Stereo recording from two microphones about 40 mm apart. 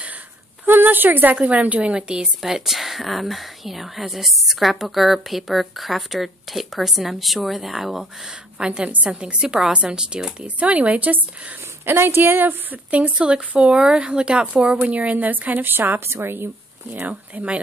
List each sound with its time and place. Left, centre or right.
0.7 s speech: right
1.3 s speech: right
1.8 s speech: right
2.5 s speech: centre
8.5 s speech: right
10.6 s speech: right
11.1 s a woman's voice: right
11.8 s a woman's voice: right
12.9 s speech: right
13.7 s speech: right
14.9 s a woman's voice: right
15.7 s a woman's voice: right
17.1 s speech: right